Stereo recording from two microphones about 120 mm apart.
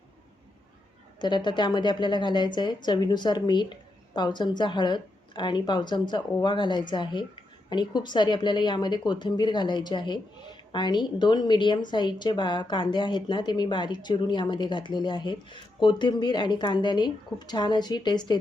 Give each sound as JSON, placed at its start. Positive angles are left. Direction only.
{"t": 1.2, "sound": "a woman's voice", "side_deg": 40}